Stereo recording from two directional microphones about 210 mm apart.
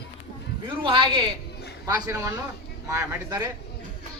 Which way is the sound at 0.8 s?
25° right (ahead or behind).